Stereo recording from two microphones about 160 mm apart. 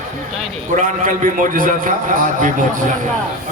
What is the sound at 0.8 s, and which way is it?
A man's voice, 55° right (ahead or behind).